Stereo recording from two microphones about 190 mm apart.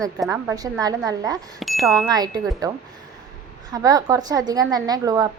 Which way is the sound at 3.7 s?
20° right (ahead or behind).